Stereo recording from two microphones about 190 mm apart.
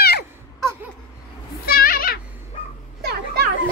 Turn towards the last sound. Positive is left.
turn(degrees=-55)  # may be behind; listen again after turning